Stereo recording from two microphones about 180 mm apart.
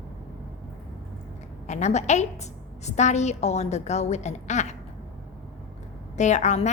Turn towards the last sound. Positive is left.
turn(degrees=40)  # may be behind; listen again after turning